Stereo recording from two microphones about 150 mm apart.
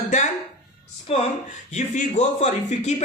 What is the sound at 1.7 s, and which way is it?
A man's voice, 55° left (ahead or behind).